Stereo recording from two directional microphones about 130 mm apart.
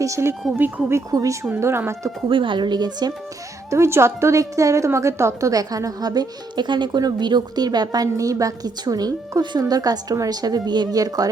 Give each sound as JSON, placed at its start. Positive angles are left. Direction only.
{"t": 0.0, "sound": "a woman's voice", "side_deg": -20}
{"t": 2.3, "sound": "speech", "side_deg": -40}
{"t": 3.7, "sound": "a woman's voice", "side_deg": -20}